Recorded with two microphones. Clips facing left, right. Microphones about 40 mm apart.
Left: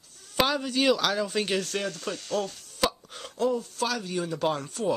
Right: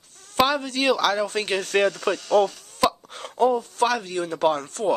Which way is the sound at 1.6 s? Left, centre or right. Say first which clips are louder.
Right 10 dB; right.